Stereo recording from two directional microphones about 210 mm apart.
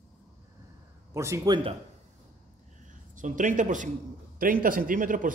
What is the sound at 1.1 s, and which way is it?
Speech, 15° right (ahead or behind).